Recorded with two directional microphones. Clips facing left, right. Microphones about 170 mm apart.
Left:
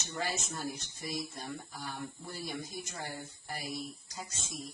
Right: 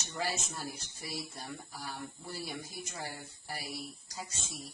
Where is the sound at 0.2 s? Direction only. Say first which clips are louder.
Even; 5° right (ahead or behind).